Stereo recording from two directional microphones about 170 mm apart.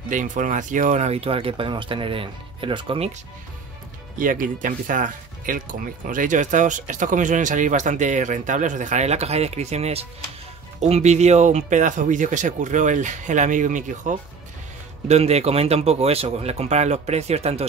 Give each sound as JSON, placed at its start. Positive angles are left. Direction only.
{"t": 0.1, "sound": "speech", "side_deg": -50}
{"t": 4.2, "sound": "speech", "side_deg": -50}